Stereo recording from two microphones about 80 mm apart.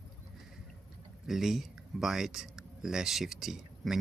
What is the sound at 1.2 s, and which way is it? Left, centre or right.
Speech, centre.